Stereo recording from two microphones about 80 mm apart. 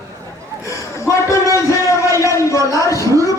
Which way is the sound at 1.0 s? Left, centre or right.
Left.